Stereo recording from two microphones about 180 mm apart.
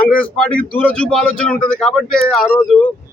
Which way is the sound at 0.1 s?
5° left (ahead or behind).